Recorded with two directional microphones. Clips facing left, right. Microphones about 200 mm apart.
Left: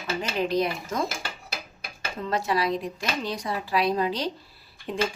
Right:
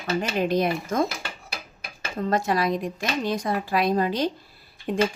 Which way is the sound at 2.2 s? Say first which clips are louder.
Right 2 dB; 50° right (ahead or behind).